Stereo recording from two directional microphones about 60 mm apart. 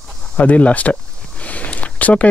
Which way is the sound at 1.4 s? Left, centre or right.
Left.